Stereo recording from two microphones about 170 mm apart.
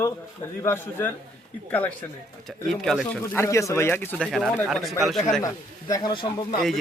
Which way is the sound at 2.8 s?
Centre (ahead or behind).